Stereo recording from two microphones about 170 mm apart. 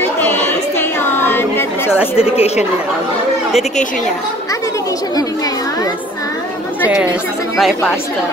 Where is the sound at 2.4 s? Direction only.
40° left (ahead or behind).